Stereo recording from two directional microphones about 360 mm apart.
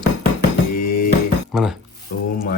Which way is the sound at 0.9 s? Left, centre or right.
Left.